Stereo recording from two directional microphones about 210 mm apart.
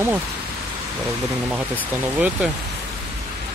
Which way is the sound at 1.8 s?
10° right (ahead or behind).